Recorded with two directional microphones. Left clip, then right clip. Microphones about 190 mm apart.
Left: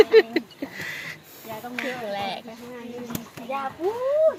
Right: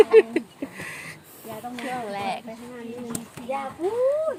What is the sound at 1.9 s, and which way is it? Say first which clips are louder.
Speech: right 2 dB; 20° right (ahead or behind).